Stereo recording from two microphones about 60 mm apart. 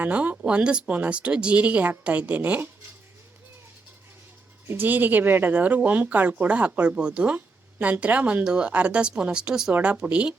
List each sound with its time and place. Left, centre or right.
0.0 s speech: right
4.7 s a woman's voice: right